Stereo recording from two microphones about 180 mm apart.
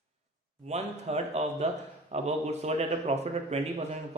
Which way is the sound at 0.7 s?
35° right (ahead or behind).